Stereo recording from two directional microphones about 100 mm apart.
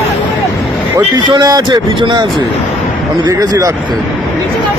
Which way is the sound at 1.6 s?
50° right (ahead or behind).